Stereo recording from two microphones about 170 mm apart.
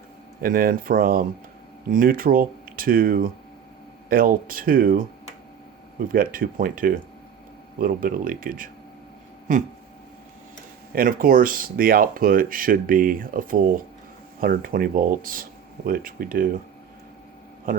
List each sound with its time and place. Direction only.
0.4 s speech: 55° right (ahead or behind)
6.1 s speech: 55° right (ahead or behind)
9.5 s a sound: 50° right (ahead or behind)
10.9 s speech: 55° right (ahead or behind)